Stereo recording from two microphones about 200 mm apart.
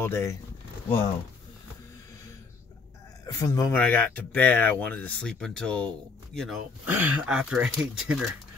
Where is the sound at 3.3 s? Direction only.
15° left (ahead or behind).